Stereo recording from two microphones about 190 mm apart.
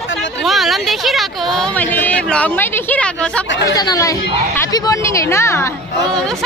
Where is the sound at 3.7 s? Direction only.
20° left (ahead or behind).